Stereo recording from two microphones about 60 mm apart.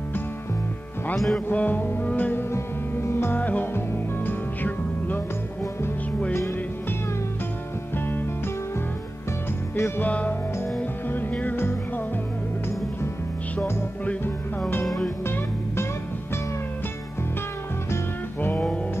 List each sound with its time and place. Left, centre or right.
1.1 s music: centre
1.5 s music: left
2.5 s music: left
3.3 s music: left
9.8 s music: left
10.0 s music: left
10.8 s music: left
15.2 s music: left
17.9 s music: left